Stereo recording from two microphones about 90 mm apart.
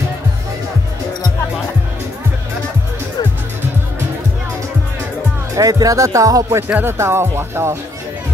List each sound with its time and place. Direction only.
5.6 s speech: 40° right (ahead or behind)
6.7 s speech: 25° right (ahead or behind)